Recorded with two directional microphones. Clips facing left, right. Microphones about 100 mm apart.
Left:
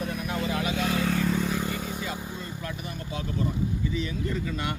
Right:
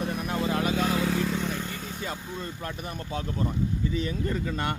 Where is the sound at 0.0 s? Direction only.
30° right (ahead or behind).